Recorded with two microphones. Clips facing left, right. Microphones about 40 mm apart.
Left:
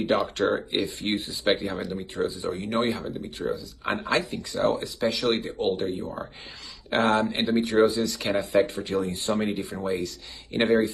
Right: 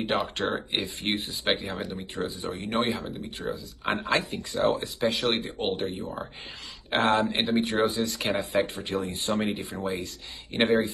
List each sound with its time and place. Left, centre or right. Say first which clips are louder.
0.0 s speech: left 4 dB; right